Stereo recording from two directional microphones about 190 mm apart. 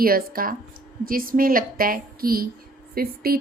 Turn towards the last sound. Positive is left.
turn(degrees=-50)  # may be behind; listen again after turning